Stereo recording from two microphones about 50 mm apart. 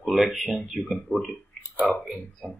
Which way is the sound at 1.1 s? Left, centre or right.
Left.